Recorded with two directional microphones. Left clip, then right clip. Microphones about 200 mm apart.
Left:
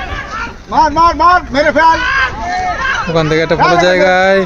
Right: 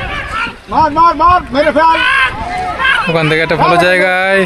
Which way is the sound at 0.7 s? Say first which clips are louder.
Even; 15° right (ahead or behind).